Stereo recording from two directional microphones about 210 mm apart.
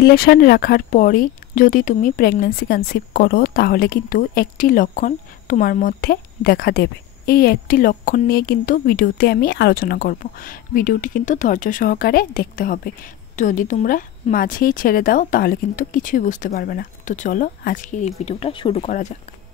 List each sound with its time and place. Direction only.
0.0 s speech: 45° left (ahead or behind)
18.2 s speech: 25° left (ahead or behind)